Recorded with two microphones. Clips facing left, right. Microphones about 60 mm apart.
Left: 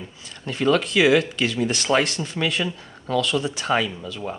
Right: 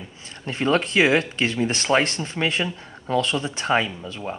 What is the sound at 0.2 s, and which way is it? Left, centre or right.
Speech, right.